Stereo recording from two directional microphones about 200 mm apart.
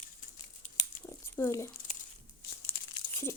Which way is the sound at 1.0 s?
15° left (ahead or behind).